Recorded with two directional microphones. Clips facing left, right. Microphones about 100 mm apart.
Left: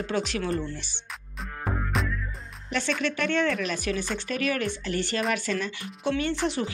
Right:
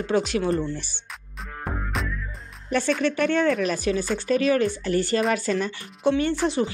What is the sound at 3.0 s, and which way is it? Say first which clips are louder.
Speech: right 4 dB; 40° right (ahead or behind).